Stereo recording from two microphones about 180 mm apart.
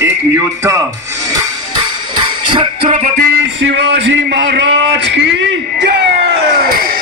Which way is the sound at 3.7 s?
75° right (ahead or behind).